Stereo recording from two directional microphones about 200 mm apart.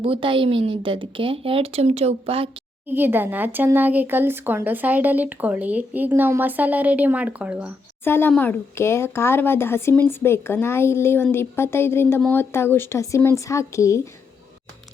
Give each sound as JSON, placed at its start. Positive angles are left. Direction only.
{"t": 0.0, "sound": "a woman's voice", "side_deg": -25}
{"t": 2.9, "sound": "speech", "side_deg": -10}
{"t": 8.0, "sound": "speech", "side_deg": 10}